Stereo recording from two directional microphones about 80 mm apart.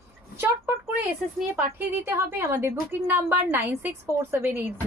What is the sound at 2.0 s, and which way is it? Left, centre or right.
A woman's voice, right.